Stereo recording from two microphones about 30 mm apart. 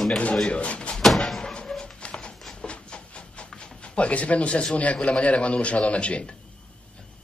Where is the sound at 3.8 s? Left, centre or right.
Left.